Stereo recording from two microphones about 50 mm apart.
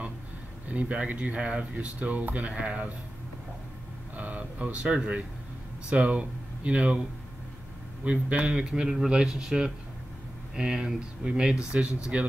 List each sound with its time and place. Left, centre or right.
0.7 s speech: right
4.2 s a sound: right
5.9 s speech: right
8.0 s speech: right
11.7 s speech: right